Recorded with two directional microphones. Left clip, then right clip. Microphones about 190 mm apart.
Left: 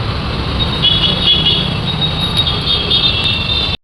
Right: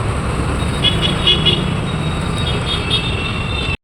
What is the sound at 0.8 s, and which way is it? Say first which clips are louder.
Vehicle: left 4 dB; 70° right (ahead or behind).